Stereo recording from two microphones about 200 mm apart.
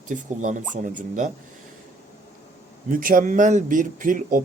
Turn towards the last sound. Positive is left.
turn(degrees=-40)  # may be behind; listen again after turning